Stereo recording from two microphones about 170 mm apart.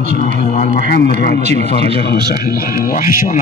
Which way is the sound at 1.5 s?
80° left.